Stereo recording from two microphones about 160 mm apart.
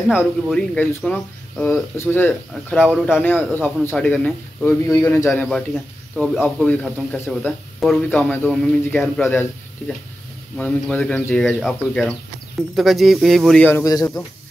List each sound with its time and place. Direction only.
0.1 s speech: 5° right (ahead or behind)
0.6 s speech: 10° left (ahead or behind)
2.8 s speech: 5° right (ahead or behind)
3.2 s speech: 10° left (ahead or behind)
10.6 s speech: 5° left (ahead or behind)
13.7 s speech: 20° left (ahead or behind)